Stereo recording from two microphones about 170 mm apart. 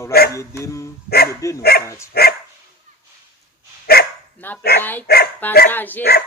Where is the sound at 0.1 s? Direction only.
65° left (ahead or behind).